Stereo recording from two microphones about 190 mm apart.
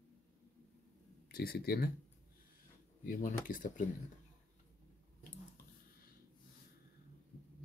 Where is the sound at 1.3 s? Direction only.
55° left (ahead or behind).